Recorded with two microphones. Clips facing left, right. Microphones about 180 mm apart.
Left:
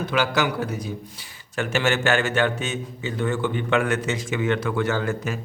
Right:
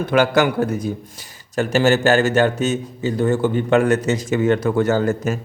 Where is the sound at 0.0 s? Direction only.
50° right (ahead or behind).